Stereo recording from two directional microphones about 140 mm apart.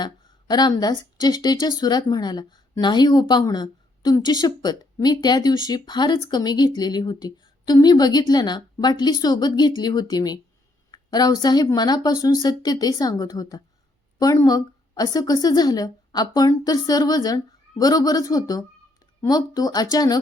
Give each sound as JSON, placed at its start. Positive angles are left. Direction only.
{"t": 0.0, "sound": "speech", "side_deg": 30}